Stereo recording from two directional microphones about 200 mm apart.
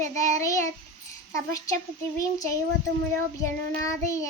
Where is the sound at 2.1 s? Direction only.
15° left (ahead or behind).